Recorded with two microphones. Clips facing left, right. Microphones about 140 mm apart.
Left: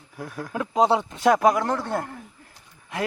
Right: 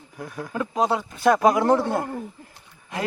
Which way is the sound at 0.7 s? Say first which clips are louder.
Left 4 dB; 25° left (ahead or behind).